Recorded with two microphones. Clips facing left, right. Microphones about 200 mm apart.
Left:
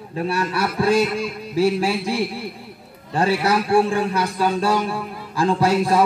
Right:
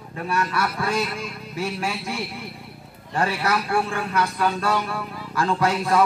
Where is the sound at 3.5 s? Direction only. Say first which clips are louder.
Left 8 dB; 30° left (ahead or behind).